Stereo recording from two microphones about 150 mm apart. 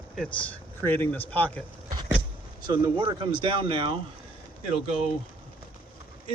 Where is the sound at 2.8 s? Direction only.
30° right (ahead or behind).